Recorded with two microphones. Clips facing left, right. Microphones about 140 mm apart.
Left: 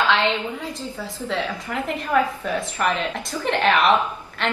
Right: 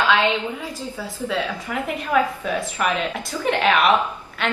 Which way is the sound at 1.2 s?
10° right (ahead or behind).